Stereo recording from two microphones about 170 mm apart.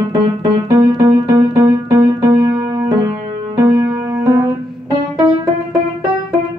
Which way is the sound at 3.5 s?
20° right (ahead or behind).